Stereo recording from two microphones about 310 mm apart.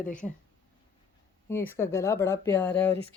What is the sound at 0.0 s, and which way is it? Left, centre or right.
Speech, centre.